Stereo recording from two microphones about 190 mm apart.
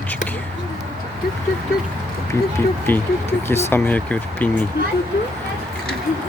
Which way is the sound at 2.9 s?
10° left (ahead or behind).